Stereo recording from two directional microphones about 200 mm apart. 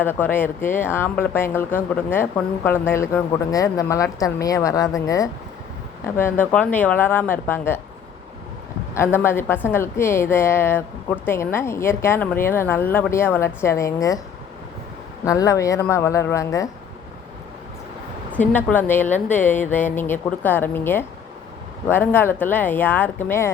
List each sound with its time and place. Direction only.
0.0 s a woman's voice: 10° left (ahead or behind)
9.0 s a woman's voice: 10° left (ahead or behind)
15.2 s a woman's voice: 15° left (ahead or behind)
18.3 s a woman's voice: 10° left (ahead or behind)